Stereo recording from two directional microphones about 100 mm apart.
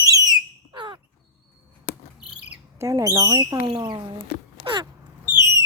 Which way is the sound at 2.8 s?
35° right (ahead or behind).